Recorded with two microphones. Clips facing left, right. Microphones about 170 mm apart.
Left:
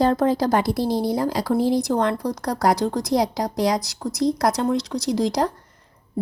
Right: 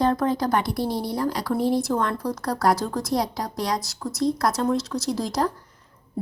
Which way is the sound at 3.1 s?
25° left (ahead or behind).